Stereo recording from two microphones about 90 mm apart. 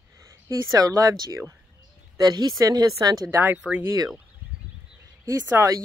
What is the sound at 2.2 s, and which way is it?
Speech, 50° right (ahead or behind).